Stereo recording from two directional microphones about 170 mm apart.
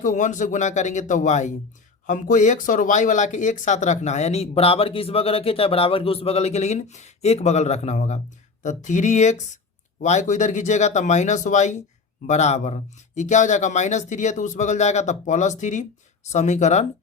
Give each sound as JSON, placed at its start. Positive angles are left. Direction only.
{"t": 0.0, "sound": "speech", "side_deg": 45}